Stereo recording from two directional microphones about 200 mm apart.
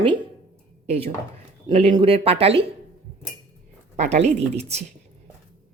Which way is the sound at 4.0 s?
35° right (ahead or behind).